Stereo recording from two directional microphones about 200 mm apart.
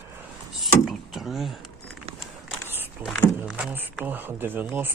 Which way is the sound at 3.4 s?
5° right (ahead or behind).